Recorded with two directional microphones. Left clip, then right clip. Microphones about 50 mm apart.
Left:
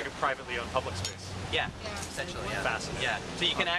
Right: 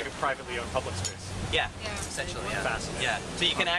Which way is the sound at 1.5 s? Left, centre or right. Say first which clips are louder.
Right 3 dB; centre.